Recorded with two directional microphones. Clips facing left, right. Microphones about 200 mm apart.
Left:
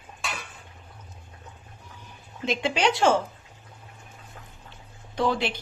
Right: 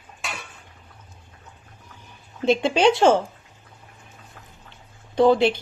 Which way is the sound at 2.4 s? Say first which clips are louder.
Right 7 dB; 30° right (ahead or behind).